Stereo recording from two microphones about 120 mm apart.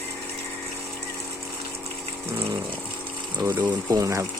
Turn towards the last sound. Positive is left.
turn(degrees=-25)  # may be behind; listen again after turning